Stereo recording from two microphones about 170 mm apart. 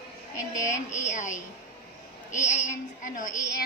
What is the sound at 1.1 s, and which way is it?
Speech, 45° left (ahead or behind).